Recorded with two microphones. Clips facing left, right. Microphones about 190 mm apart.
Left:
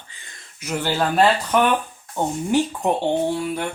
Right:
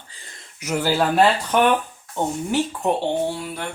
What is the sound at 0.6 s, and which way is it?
Speech, 10° right (ahead or behind).